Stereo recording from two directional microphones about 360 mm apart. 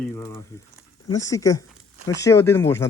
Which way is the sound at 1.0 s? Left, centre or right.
Centre.